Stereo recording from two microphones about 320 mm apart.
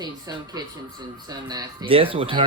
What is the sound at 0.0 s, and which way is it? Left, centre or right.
Speech, centre.